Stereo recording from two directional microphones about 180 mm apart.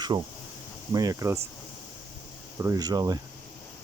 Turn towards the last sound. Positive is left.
turn(degrees=-20)  # may be behind; listen again after turning